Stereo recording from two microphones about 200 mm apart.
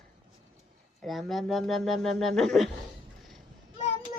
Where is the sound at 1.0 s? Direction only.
Centre (ahead or behind).